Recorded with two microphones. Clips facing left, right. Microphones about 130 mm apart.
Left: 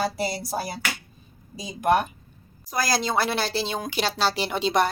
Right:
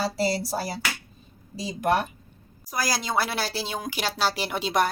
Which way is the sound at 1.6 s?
15° left (ahead or behind).